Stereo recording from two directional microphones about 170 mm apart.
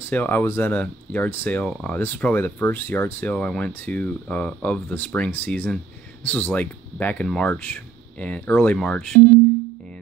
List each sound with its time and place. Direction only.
0.1 s speech: 10° left (ahead or behind)